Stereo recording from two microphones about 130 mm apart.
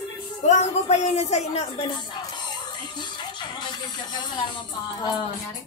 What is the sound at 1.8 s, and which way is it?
Music, 35° left (ahead or behind).